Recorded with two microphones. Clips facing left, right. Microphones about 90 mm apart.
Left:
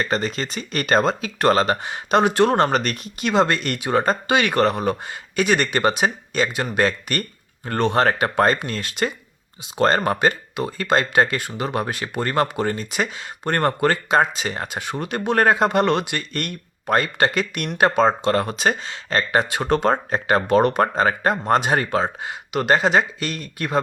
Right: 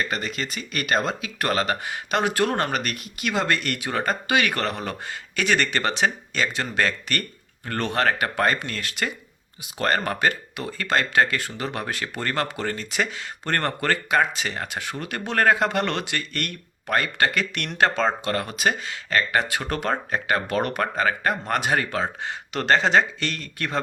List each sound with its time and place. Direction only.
0.0 s speech: 35° left (ahead or behind)
22.2 s speech: 15° left (ahead or behind)